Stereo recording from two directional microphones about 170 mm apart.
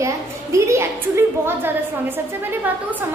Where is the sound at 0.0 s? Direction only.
15° right (ahead or behind).